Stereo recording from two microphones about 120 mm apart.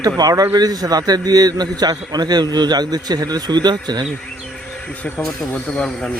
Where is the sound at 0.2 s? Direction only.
30° right (ahead or behind).